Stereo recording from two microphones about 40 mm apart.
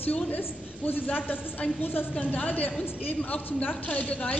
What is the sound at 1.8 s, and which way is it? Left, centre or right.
Speech, left.